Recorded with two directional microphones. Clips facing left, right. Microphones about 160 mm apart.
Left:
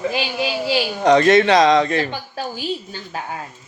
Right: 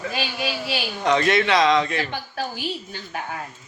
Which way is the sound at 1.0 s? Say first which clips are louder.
Left 7 dB; 40° left (ahead or behind).